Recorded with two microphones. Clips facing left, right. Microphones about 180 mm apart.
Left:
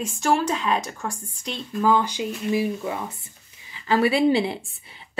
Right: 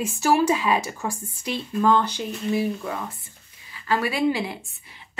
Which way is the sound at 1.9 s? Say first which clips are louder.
Even; 10° left (ahead or behind).